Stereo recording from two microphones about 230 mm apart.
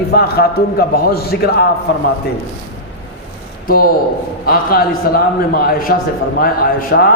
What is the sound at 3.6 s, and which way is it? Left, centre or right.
A man's voice, left.